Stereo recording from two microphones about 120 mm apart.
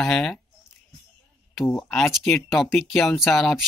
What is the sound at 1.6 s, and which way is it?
Speech, 5° left (ahead or behind).